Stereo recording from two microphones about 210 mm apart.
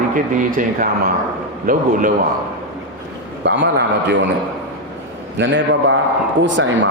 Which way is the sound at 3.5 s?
55° right (ahead or behind).